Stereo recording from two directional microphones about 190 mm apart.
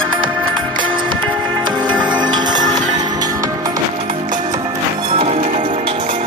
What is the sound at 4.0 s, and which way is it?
Music, 35° right (ahead or behind).